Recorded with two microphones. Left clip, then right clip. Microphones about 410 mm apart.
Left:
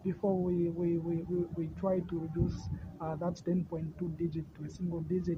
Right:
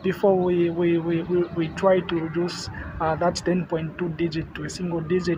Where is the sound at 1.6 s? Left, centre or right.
Left.